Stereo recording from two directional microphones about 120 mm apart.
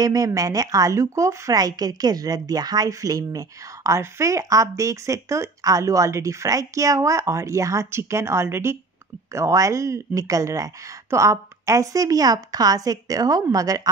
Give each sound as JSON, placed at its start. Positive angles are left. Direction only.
{"t": 0.0, "sound": "speech", "side_deg": -30}